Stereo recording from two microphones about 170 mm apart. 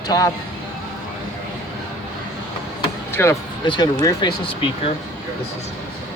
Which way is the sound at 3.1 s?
15° left (ahead or behind).